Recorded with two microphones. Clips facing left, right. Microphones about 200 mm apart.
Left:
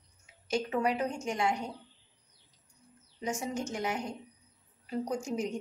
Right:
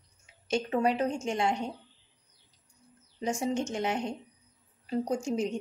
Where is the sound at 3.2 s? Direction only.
30° right (ahead or behind).